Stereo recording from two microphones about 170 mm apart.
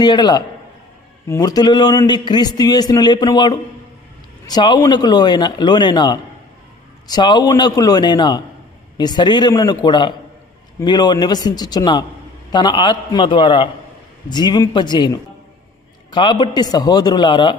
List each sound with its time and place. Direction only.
0.0 s a man's voice: 25° left (ahead or behind)